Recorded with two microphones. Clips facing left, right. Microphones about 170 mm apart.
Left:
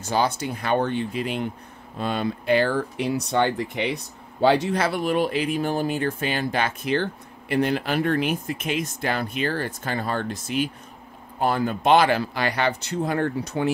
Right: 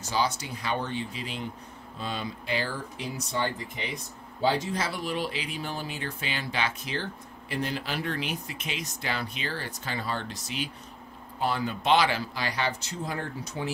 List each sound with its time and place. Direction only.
0.1 s speech: 55° left (ahead or behind)